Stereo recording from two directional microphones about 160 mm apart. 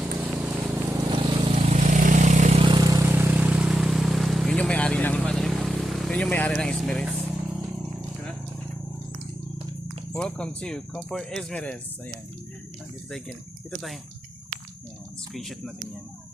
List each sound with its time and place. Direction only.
0.0 s run: 10° right (ahead or behind)
1.1 s vehicle: 35° right (ahead or behind)
2.6 s vehicle: 30° right (ahead or behind); by 7.2 s centre (ahead or behind)
10.1 s speech: 5° left (ahead or behind)
13.7 s speech: 5° left (ahead or behind)
15.3 s speech: centre (ahead or behind)